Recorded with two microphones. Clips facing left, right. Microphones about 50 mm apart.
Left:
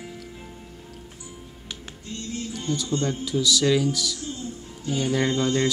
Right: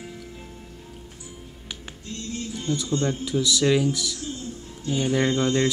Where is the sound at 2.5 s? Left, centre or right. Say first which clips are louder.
Right 1 dB; right.